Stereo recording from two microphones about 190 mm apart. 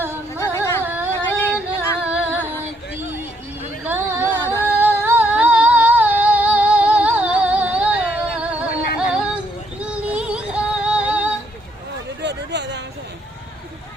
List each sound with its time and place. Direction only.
0.3 s music: 15° left (ahead or behind)
0.9 s music: 10° right (ahead or behind)
3.8 s a sound: 10° right (ahead or behind)
4.4 s music: 10° left (ahead or behind)
4.8 s music: 10° right (ahead or behind)
8.7 s music: 55° left (ahead or behind)
9.0 s music: 5° right (ahead or behind)
12.2 s a sound: 65° right (ahead or behind)